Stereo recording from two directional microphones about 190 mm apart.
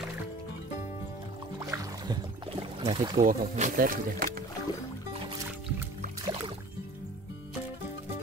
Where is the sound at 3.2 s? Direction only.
40° right (ahead or behind).